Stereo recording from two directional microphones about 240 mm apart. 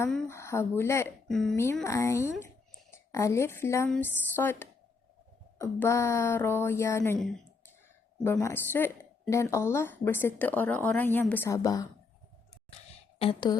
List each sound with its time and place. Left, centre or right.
0.0 s a woman's voice: centre
13.1 s a woman's voice: left